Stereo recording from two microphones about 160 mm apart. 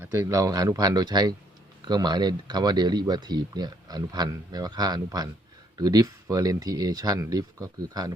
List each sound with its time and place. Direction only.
0.0 s speech: 15° right (ahead or behind)